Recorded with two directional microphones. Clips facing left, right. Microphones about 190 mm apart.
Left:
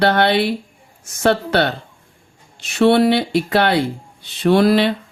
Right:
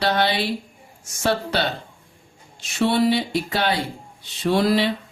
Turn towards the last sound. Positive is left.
turn(degrees=65)  # may be behind; listen again after turning